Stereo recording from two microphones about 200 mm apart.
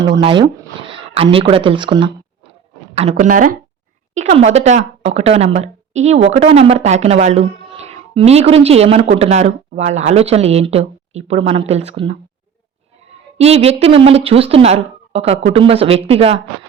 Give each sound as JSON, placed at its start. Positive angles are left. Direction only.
{"t": 0.2, "sound": "speech", "side_deg": -25}
{"t": 13.4, "sound": "speech", "side_deg": -30}